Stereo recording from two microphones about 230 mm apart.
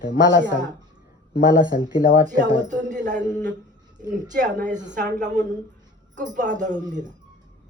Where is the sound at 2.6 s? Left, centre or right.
Right.